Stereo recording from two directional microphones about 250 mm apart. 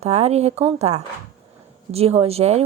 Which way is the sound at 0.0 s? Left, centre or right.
Right.